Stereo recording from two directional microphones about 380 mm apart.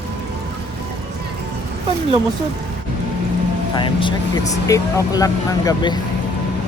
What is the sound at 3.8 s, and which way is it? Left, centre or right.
Speech, centre.